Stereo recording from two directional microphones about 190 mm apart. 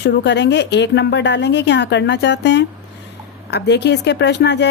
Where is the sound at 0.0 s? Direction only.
65° left (ahead or behind).